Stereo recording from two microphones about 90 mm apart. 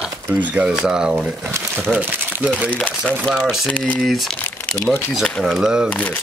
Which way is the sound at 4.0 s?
Centre (ahead or behind).